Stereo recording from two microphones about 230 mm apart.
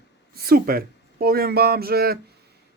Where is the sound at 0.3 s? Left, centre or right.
Right.